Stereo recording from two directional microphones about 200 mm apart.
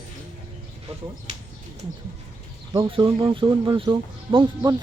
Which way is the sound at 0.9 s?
30° right (ahead or behind).